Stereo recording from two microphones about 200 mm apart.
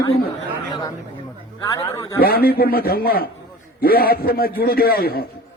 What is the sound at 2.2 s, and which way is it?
A man's voice, 50° left (ahead or behind).